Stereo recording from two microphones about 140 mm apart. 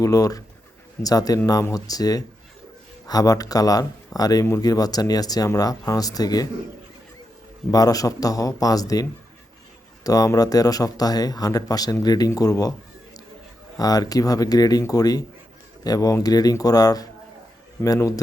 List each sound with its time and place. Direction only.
0.0 s speech: 25° left (ahead or behind)
7.7 s speech: 25° left (ahead or behind)
13.7 s speech: 25° left (ahead or behind)